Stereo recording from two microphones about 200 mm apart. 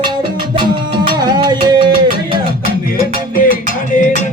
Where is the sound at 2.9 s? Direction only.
45° left (ahead or behind).